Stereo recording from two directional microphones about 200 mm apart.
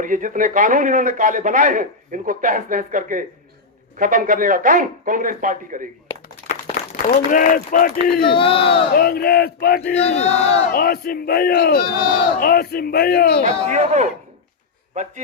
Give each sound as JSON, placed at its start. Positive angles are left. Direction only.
{"t": 0.0, "sound": "a man's voice", "side_deg": -40}
{"t": 6.9, "sound": "speech", "side_deg": 40}
{"t": 8.3, "sound": "speech", "side_deg": 25}
{"t": 9.0, "sound": "speech", "side_deg": 50}
{"t": 10.0, "sound": "battle cry", "side_deg": 30}
{"t": 10.7, "sound": "speech", "side_deg": 45}
{"t": 13.7, "sound": "a man's voice", "side_deg": -35}